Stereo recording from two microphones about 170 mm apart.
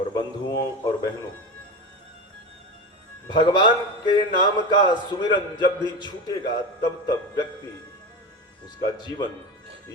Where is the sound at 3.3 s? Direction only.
25° left (ahead or behind).